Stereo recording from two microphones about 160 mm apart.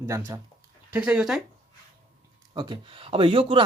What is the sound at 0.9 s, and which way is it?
Speech, 5° right (ahead or behind).